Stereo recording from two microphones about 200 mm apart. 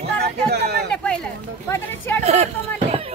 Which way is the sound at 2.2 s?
35° right (ahead or behind).